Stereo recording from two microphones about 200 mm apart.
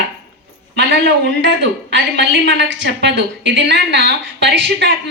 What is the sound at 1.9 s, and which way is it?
A woman's voice, 65° right (ahead or behind).